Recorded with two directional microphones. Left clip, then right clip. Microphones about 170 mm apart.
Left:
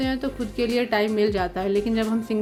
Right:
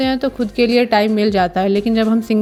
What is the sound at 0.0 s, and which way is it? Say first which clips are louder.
Speech: right 9 dB; 35° right (ahead or behind).